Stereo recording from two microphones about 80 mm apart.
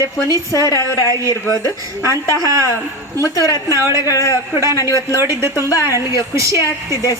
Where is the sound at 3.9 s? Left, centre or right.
Left.